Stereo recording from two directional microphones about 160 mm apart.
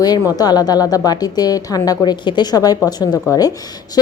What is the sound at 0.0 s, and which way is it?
A woman's voice, 25° left (ahead or behind).